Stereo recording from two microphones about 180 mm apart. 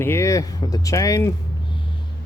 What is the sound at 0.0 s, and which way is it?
Speech, 15° left (ahead or behind).